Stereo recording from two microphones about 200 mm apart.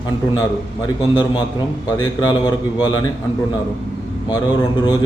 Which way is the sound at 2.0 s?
20° left (ahead or behind).